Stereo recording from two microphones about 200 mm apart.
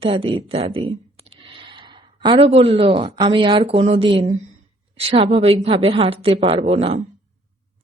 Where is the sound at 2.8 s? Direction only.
25° right (ahead or behind).